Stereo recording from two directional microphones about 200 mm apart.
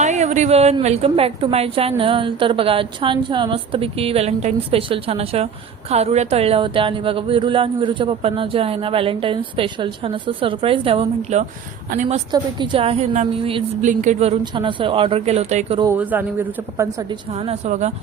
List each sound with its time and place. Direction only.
0.0 s speech: 35° right (ahead or behind)
15.8 s a man's voice: 10° right (ahead or behind)
17.3 s speech: 30° right (ahead or behind)